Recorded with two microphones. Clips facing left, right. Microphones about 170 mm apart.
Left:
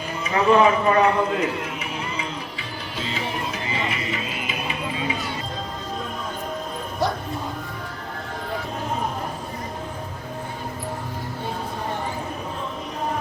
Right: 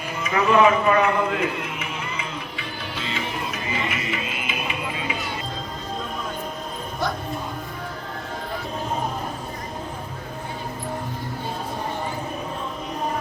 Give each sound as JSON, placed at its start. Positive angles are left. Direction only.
{"t": 0.3, "sound": "a man's voice", "side_deg": 35}
{"t": 3.0, "sound": "music", "side_deg": 35}